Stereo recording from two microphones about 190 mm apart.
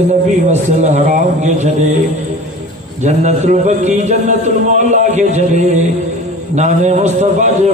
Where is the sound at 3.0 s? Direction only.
40° right (ahead or behind).